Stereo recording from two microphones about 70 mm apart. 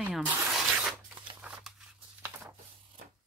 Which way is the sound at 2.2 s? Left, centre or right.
Right.